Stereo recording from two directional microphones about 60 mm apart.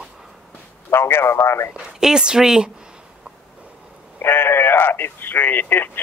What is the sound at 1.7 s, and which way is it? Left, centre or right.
Speech, centre.